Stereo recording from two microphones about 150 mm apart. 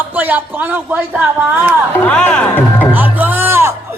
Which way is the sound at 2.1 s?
10° left (ahead or behind).